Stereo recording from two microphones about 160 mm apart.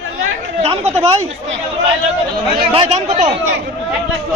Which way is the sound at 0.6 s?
40° right (ahead or behind).